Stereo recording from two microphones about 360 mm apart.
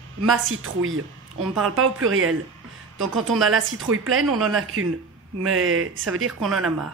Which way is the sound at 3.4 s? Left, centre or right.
Right.